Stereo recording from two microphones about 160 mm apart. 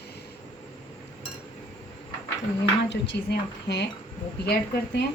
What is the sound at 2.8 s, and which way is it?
A woman's voice, 90° left.